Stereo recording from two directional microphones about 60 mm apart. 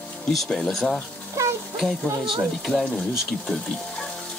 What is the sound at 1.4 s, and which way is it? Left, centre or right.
Music, right.